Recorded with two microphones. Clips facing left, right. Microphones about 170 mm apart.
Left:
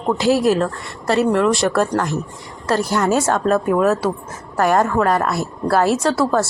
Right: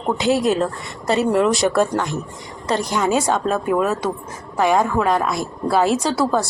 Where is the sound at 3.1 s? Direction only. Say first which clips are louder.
Left 2 dB; 5° left (ahead or behind).